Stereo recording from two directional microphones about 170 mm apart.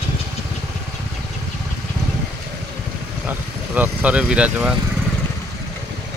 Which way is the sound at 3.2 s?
10° right (ahead or behind).